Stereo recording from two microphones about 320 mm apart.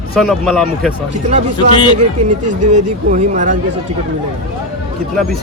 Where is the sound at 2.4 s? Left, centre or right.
Right.